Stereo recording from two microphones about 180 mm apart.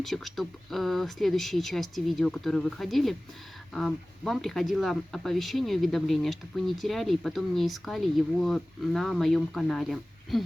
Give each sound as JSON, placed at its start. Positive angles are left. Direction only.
{"t": 0.0, "sound": "speech", "side_deg": 0}